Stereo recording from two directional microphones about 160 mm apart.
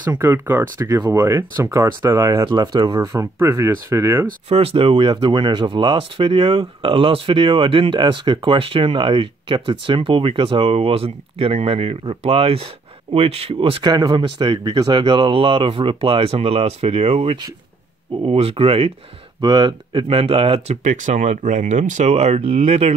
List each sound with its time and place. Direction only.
0.0 s speech: 10° right (ahead or behind)
4.5 s speech: 40° right (ahead or behind)
20.8 s speech: 55° right (ahead or behind)